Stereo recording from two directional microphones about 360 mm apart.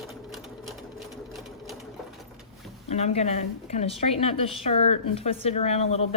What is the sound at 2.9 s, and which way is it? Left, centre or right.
A woman's voice, centre.